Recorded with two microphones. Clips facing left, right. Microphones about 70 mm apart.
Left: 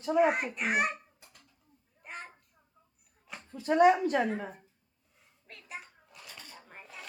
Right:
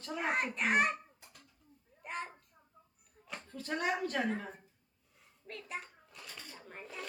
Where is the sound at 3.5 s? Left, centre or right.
Centre.